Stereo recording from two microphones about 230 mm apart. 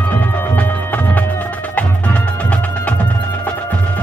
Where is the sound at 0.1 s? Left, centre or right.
Centre.